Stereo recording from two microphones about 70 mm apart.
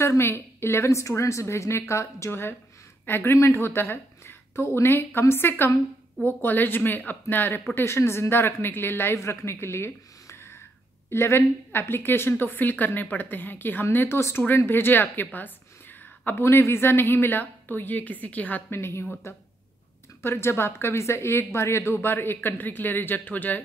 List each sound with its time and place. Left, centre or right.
0.0 s a woman's voice: left
18.8 s a woman's voice: left